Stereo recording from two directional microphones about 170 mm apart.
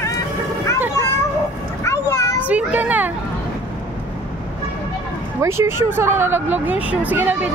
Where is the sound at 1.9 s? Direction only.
20° left (ahead or behind).